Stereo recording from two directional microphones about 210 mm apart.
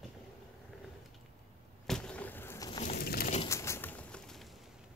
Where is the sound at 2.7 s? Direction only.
35° left (ahead or behind).